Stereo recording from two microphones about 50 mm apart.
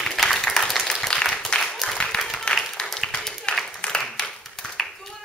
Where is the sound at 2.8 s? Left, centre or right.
Left.